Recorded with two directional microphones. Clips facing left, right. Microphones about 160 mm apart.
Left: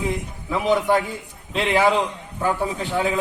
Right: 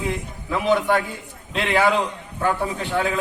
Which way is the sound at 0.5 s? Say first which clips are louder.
Even; 15° left (ahead or behind).